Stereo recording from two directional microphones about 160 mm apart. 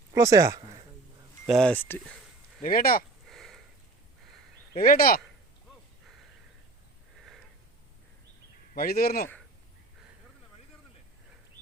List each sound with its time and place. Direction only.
0.1 s speech: 20° right (ahead or behind)
1.5 s speech: 5° left (ahead or behind)
2.6 s speech: 60° left (ahead or behind)
3.2 s sniff: centre (ahead or behind)
4.8 s speech: 65° left (ahead or behind)
7.2 s a sound: centre (ahead or behind)
8.7 s speech: 70° left (ahead or behind)